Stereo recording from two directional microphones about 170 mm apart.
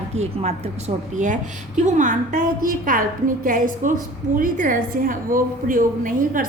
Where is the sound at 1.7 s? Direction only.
45° right (ahead or behind).